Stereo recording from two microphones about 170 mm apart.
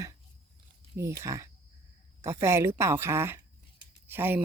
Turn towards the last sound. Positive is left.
turn(degrees=-10)  # may be behind; listen again after turning